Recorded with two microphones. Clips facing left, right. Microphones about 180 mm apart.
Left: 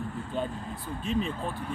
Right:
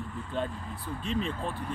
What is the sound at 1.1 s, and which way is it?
Speech, 5° left (ahead or behind).